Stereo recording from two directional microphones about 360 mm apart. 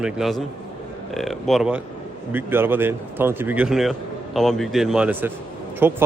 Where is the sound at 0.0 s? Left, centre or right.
Centre.